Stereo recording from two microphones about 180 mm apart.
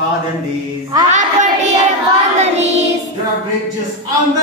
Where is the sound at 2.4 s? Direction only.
40° right (ahead or behind).